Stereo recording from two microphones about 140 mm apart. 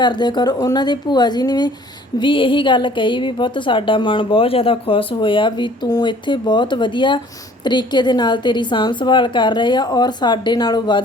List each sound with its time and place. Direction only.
0.0 s a woman's voice: 30° left (ahead or behind)